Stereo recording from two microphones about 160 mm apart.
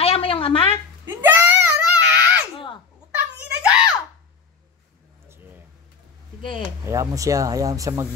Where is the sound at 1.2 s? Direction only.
15° right (ahead or behind).